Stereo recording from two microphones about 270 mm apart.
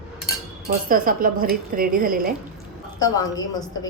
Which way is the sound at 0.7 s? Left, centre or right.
Right.